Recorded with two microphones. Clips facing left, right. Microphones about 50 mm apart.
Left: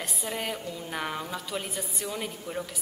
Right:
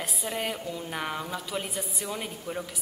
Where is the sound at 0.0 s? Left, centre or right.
Centre.